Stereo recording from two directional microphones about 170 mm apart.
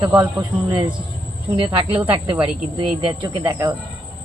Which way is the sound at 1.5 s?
30° right (ahead or behind).